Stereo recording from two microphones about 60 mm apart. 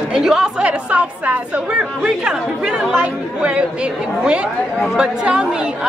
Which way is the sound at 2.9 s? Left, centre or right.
Right.